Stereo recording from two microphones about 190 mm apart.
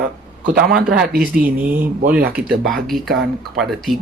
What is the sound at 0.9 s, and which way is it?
Speech, 50° right (ahead or behind).